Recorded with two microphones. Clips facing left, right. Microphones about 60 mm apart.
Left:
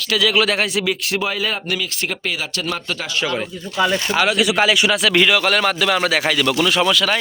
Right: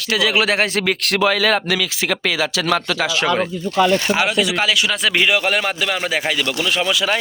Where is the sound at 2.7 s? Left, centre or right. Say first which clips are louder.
Right 6 dB; right.